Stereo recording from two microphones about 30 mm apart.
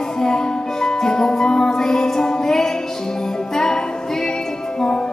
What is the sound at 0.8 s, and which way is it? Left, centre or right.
Music, centre.